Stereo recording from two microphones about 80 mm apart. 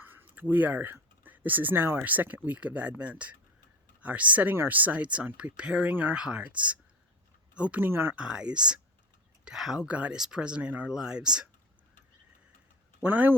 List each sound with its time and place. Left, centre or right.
0.0 s speech: right
7.9 s speech: right
8.1 s speech: centre
13.0 s speech: right